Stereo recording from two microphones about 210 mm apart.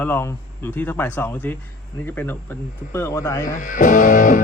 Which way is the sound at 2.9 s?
10° left (ahead or behind).